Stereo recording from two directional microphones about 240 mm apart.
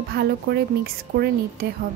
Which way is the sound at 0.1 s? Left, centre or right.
Right.